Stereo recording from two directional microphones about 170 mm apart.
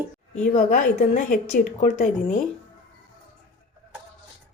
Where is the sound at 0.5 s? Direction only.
45° left (ahead or behind).